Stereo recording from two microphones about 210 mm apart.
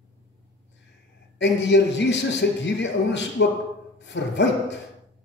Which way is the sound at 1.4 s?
55° left (ahead or behind).